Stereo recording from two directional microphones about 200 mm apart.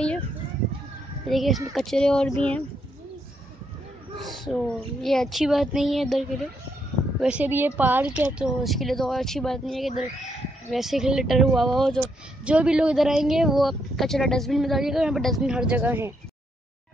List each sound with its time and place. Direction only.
1.3 s speech: centre (ahead or behind)
4.2 s speech: centre (ahead or behind)